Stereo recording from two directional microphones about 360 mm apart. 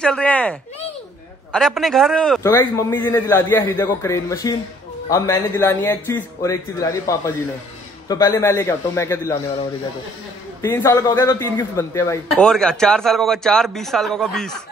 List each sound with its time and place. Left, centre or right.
0.0 s a man's voice: centre
10.6 s speech: centre